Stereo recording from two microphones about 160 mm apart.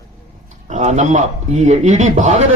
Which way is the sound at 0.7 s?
45° right (ahead or behind).